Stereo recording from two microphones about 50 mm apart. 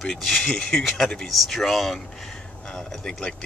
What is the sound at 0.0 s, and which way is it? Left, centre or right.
Speech, centre.